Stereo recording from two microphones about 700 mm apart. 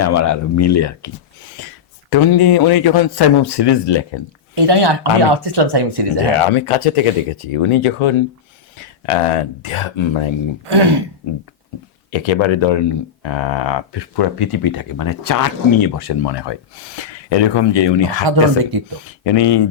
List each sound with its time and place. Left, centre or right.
0.0 s speech: left
4.5 s speech: right
6.5 s speech: left
10.7 s speech: right
12.1 s speech: left
18.3 s speech: right
19.2 s speech: left